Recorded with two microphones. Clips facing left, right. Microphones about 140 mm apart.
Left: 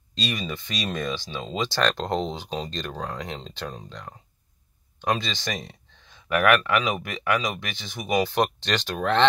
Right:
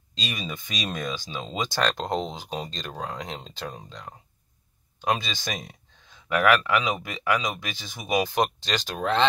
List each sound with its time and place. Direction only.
0.3 s speech: 15° right (ahead or behind)